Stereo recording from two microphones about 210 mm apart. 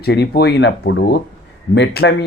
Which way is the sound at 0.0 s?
50° left (ahead or behind).